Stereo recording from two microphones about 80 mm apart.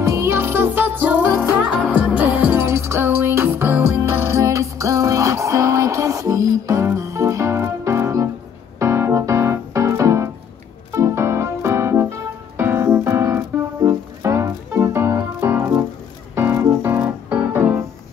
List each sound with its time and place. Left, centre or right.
0.0 s music: right; by 2.6 s centre
2.6 s music: right
4.4 s music: right
8.7 s keyboard: right
12.5 s music: right
15.4 s keyboard: right
16.3 s music: right
17.5 s piano: right